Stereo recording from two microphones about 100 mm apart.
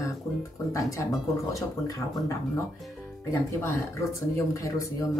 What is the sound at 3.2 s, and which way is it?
Speech, 30° left (ahead or behind).